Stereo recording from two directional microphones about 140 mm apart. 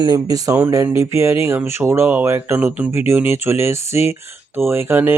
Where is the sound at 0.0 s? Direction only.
30° right (ahead or behind).